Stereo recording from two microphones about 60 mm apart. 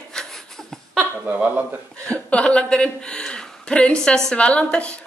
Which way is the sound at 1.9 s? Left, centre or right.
Centre.